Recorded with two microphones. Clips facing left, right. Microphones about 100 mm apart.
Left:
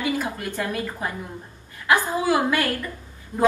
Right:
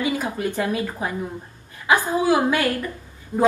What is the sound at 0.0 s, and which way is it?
A woman's voice, 15° right (ahead or behind).